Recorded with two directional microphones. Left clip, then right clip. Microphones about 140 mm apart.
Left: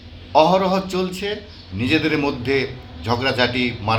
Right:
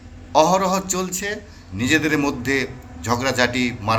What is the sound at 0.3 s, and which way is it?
A man's voice, 5° left (ahead or behind).